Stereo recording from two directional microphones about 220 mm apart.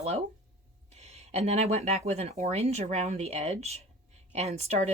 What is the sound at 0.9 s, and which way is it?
Speech, 30° right (ahead or behind).